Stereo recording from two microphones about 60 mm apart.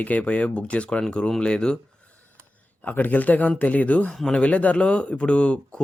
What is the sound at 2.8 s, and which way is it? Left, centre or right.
Speech, left.